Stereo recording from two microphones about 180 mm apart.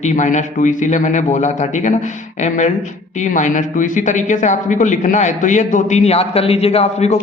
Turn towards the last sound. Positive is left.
turn(degrees=35)  # may be behind; listen again after turning